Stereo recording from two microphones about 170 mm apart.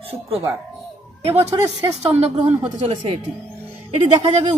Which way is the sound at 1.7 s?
40° right (ahead or behind).